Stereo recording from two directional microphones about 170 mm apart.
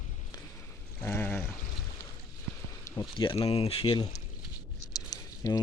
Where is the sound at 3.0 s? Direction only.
30° left (ahead or behind).